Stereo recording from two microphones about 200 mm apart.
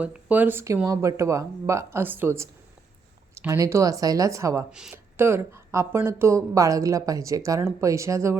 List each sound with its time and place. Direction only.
0.0 s speech: 5° right (ahead or behind)
4.7 s speech: 5° right (ahead or behind)